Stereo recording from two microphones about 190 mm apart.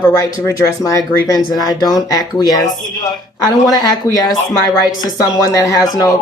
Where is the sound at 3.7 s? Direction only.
20° left (ahead or behind).